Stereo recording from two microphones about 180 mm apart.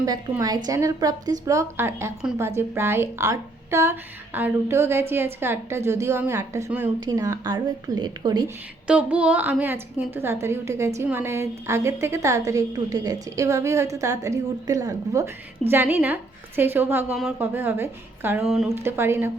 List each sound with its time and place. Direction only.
0.0 s a woman's voice: 20° right (ahead or behind)
8.9 s a woman's voice: 5° right (ahead or behind)
18.4 s speech: centre (ahead or behind)
18.7 s a woman's voice: 15° right (ahead or behind)